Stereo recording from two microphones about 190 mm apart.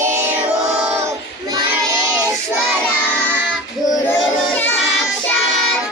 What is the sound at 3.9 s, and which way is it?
Child singing, 10° left (ahead or behind).